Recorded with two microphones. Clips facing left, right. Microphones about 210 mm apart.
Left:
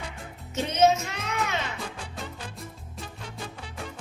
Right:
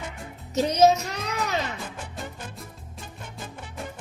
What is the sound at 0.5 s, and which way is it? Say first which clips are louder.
Music: right 3 dB; 40° right (ahead or behind).